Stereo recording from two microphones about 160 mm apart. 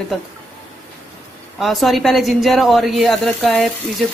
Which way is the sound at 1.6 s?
Centre (ahead or behind).